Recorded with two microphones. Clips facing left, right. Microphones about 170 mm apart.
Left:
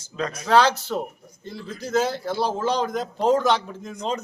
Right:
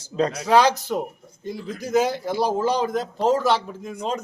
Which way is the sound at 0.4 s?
15° right (ahead or behind).